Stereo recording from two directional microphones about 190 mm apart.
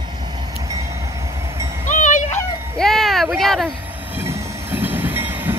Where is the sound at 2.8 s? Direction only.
Centre (ahead or behind).